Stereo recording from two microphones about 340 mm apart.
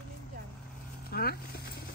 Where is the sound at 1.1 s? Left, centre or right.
Left.